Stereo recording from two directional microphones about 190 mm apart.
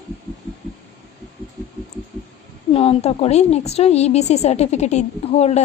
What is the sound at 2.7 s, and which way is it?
A child's voice, 30° left (ahead or behind).